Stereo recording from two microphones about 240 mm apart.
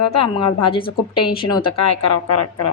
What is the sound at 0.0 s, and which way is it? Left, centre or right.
Speech, left.